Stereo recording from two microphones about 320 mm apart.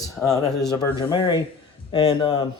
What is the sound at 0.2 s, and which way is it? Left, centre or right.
Speech, centre.